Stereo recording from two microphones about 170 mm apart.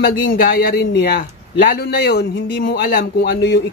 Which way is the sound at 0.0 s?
60° left (ahead or behind).